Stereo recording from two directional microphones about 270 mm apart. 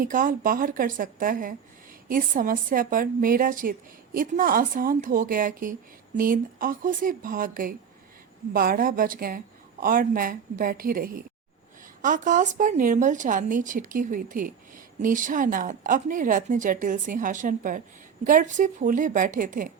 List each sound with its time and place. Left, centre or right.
0.0 s a woman's voice: right